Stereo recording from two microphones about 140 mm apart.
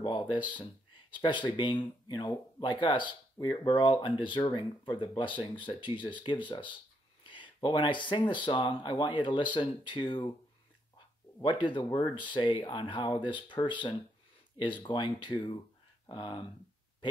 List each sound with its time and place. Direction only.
0.0 s speech: 35° left (ahead or behind)
11.4 s speech: 35° left (ahead or behind)